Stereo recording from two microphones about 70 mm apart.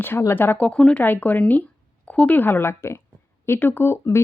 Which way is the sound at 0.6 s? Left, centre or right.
Centre.